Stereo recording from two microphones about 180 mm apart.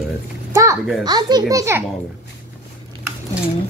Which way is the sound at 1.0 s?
20° right (ahead or behind).